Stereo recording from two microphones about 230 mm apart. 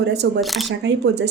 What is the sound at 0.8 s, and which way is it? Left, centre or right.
Speech, right.